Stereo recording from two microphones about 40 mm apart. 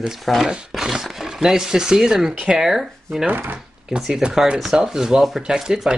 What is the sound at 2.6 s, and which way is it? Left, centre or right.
Speech, centre.